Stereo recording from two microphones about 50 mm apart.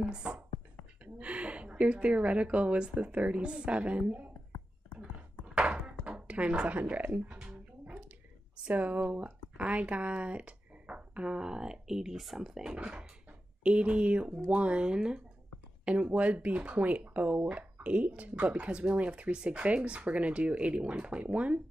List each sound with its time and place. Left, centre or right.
0.0 s beatboxing: centre
1.0 s speech: right
5.5 s a sound: right
6.8 s speech: right
7.5 s music: right
8.6 s speech: right; by 12.7 s centre
12.7 s speech: right